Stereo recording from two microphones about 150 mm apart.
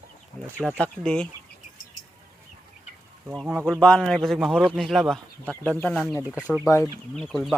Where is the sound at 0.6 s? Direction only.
5° left (ahead or behind).